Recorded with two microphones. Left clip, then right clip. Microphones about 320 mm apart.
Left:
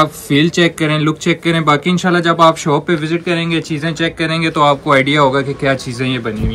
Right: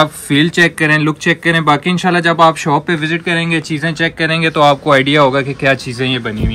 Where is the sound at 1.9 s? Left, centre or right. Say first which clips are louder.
Right 1 dB; right.